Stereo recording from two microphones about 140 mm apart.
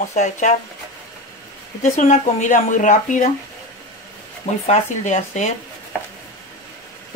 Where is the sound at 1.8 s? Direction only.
60° left (ahead or behind).